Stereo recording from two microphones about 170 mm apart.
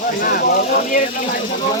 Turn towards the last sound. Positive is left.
turn(degrees=60)  # may be behind; listen again after turning